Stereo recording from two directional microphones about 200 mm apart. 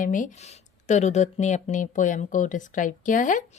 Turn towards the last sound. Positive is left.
turn(degrees=40)  # may be behind; listen again after turning